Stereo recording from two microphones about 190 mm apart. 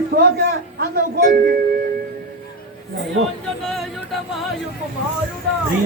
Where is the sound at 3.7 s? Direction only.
Centre (ahead or behind).